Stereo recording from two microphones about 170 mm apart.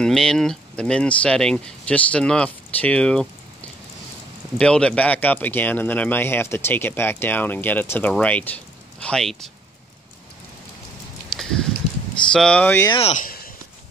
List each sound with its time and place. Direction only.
0.0 s speech: 5° left (ahead or behind)
4.6 s speech: 5° left (ahead or behind)
11.3 s a sound: centre (ahead or behind)
12.3 s speech: 5° left (ahead or behind)
12.9 s speech: 35° left (ahead or behind)